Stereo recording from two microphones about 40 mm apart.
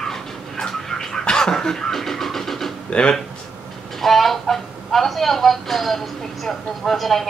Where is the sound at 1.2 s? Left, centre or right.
Centre.